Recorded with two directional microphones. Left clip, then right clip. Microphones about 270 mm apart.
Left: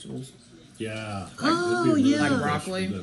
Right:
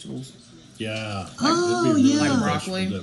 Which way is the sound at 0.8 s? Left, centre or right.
Centre.